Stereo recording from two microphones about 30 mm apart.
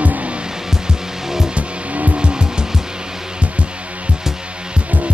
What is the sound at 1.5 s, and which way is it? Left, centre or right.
Music, right.